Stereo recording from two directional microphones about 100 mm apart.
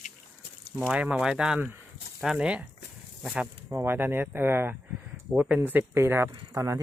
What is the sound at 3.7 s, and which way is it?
Speech, 25° right (ahead or behind).